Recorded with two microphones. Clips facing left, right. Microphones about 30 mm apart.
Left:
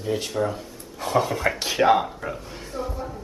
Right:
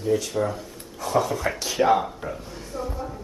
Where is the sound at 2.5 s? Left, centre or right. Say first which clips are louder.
Left 1 dB; left.